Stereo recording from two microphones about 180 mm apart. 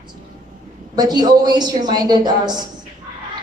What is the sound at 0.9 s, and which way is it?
A woman's voice, 25° right (ahead or behind).